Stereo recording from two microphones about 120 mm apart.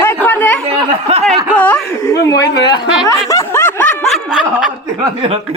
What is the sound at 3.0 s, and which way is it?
Snicker, 25° left (ahead or behind).